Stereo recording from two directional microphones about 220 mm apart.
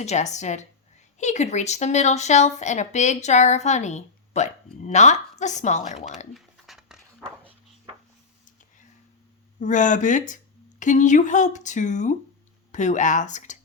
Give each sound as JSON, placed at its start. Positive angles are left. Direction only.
{"t": 0.0, "sound": "speech", "side_deg": 30}
{"t": 6.3, "sound": "a sound", "side_deg": 0}
{"t": 9.6, "sound": "speech", "side_deg": 35}